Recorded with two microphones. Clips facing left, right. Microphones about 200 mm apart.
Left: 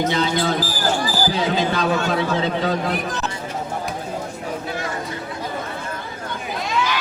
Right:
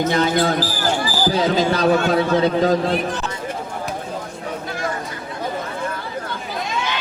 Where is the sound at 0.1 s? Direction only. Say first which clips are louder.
Right 3 dB; 50° right (ahead or behind).